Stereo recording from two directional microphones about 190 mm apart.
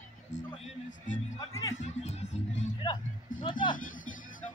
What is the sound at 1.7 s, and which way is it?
Music, 35° left (ahead or behind).